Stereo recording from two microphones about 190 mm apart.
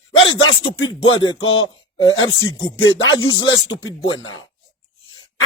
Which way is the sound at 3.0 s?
90° left.